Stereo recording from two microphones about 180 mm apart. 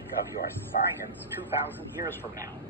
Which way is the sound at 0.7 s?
45° left (ahead or behind).